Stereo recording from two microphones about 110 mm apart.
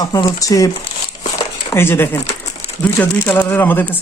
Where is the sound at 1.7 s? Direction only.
20° left (ahead or behind).